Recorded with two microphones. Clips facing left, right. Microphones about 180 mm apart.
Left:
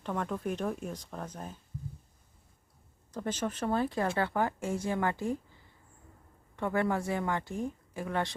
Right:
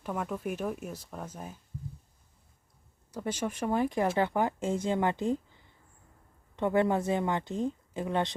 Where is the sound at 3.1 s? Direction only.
10° right (ahead or behind).